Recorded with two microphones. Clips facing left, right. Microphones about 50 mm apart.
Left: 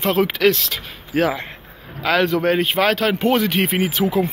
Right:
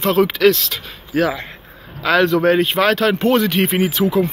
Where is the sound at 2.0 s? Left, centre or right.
Centre.